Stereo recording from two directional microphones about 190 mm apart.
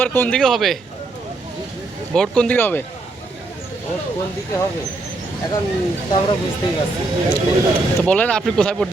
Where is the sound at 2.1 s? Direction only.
5° left (ahead or behind).